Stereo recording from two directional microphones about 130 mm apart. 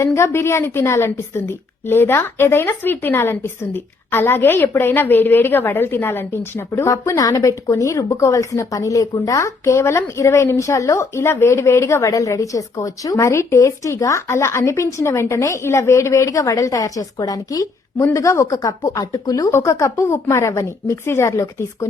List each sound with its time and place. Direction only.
0.0 s a woman's voice: 20° left (ahead or behind)